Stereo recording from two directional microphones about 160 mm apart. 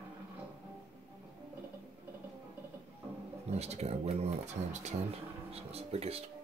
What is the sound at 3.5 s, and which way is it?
Speech, 40° right (ahead or behind).